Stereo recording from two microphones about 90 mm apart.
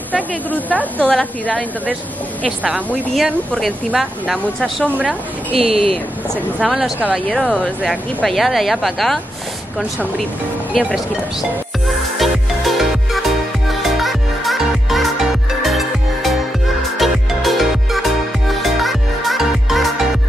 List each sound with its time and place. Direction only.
0.1 s a woman's voice: 15° left (ahead or behind)
3.5 s speech: centre (ahead or behind)
5.5 s speech: 90° right
6.6 s speech: 5° right (ahead or behind)
7.2 s a woman's voice: 5° left (ahead or behind)
10.7 s speech: 10° right (ahead or behind)
12.2 s music: centre (ahead or behind)